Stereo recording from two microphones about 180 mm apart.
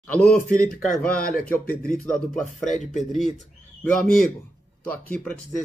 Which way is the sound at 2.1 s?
40° left (ahead or behind).